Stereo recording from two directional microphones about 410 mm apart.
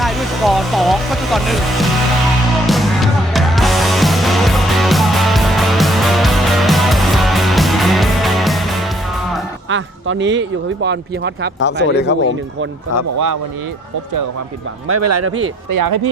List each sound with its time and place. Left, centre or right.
0.0 s speech: centre
2.6 s music: centre
9.6 s speech: right
11.6 s speech: left
14.8 s speech: right
15.4 s speech: right